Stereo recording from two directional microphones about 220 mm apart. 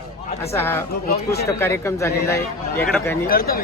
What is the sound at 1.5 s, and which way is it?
Speech, 10° left (ahead or behind).